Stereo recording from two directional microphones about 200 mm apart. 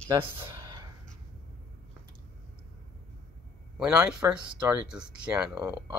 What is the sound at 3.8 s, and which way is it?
Speech, 5° right (ahead or behind).